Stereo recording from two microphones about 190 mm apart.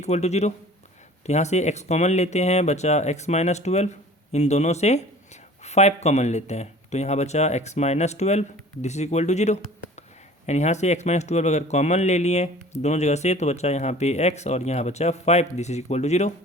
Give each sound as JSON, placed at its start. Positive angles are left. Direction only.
{"t": 0.0, "sound": "a man's voice", "side_deg": 35}